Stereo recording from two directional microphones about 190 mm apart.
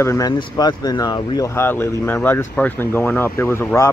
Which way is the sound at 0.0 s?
15° left (ahead or behind).